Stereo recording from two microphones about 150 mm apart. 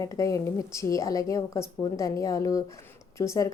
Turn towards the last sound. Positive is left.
turn(degrees=20)  # may be behind; listen again after turning